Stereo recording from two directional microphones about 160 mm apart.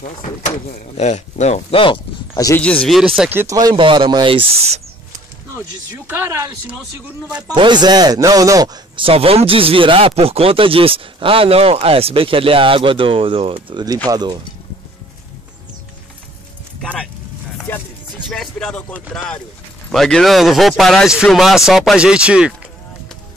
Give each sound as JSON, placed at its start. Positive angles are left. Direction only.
{"t": 0.9, "sound": "speech", "side_deg": 45}
{"t": 2.3, "sound": "speech", "side_deg": 20}
{"t": 2.6, "sound": "speech", "side_deg": 5}
{"t": 3.3, "sound": "speech", "side_deg": -20}
{"t": 4.6, "sound": "speech", "side_deg": -40}
{"t": 5.6, "sound": "speech", "side_deg": -15}
{"t": 7.4, "sound": "speech", "side_deg": -30}
{"t": 16.8, "sound": "vehicle", "side_deg": 5}
{"t": 17.7, "sound": "music", "side_deg": 10}
{"t": 18.3, "sound": "speech", "side_deg": 5}